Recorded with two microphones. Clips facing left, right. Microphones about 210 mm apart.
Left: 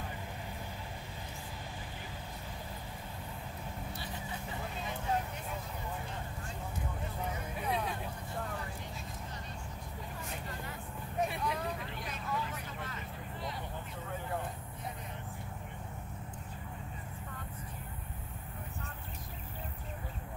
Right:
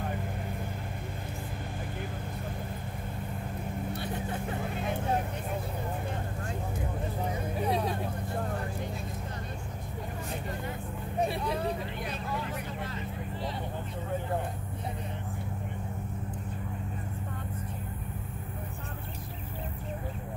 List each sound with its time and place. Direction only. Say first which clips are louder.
3.9 s vehicle: right 8 dB; 55° right (ahead or behind)
7.5 s vehicle: right 6 dB; 35° right (ahead or behind)
11.1 s vehicle: right 4 dB; 35° right (ahead or behind)